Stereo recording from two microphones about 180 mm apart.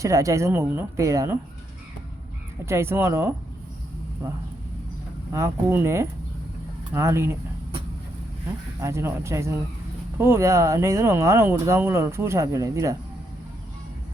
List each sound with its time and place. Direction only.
0.0 s speech: 15° right (ahead or behind)
2.6 s speech: 15° right (ahead or behind)
5.3 s speech: 15° right (ahead or behind)
8.8 s speech: 15° right (ahead or behind)